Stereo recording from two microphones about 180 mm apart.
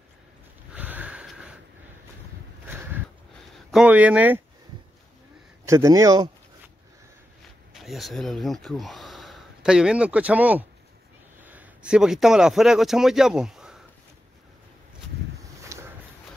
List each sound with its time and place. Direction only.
0.7 s sniff: 10° right (ahead or behind)
3.5 s speech: 5° right (ahead or behind)
5.7 s a man's voice: 15° right (ahead or behind)
7.7 s speech: centre (ahead or behind)
15.4 s a sound: 15° right (ahead or behind)